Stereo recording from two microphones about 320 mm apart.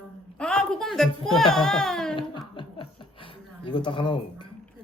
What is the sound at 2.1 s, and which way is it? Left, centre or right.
Chuckle, centre.